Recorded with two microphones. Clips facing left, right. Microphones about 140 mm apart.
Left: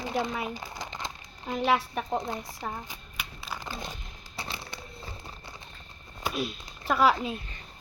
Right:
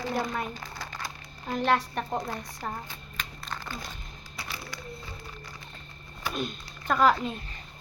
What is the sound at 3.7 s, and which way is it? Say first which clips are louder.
Speech: left 1 dB; 25° left (ahead or behind).